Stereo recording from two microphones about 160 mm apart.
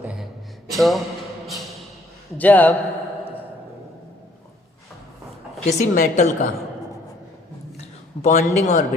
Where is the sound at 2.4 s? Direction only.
10° left (ahead or behind).